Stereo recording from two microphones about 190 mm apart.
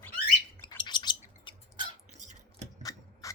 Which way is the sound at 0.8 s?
25° left (ahead or behind).